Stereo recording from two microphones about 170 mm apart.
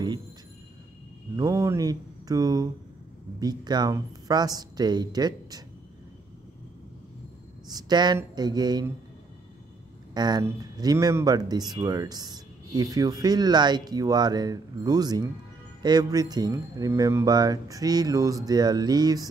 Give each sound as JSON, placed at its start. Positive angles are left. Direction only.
{"t": 1.3, "sound": "speech", "side_deg": -20}
{"t": 7.7, "sound": "speech", "side_deg": -25}
{"t": 10.1, "sound": "speech", "side_deg": -25}